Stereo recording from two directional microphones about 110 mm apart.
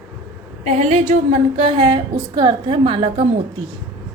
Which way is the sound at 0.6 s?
90° right.